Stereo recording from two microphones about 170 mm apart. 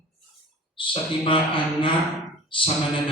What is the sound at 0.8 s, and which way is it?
A man's voice, 30° left (ahead or behind).